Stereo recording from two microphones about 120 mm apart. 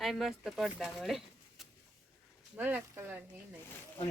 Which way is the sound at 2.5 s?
15° right (ahead or behind).